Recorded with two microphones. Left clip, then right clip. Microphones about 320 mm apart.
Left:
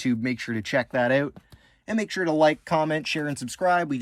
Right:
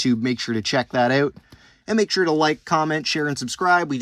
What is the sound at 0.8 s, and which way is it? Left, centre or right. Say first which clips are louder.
Speech: right 3 dB; right.